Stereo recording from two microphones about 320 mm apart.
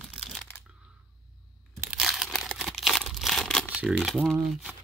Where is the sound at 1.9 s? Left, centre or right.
Centre.